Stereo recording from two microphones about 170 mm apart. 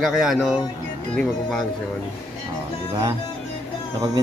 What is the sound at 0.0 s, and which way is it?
Speech, centre (ahead or behind).